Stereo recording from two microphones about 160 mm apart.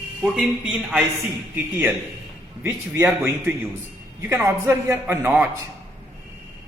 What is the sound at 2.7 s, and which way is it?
Speech, 15° right (ahead or behind).